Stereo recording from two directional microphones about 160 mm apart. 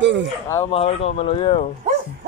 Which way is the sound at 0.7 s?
40° left (ahead or behind).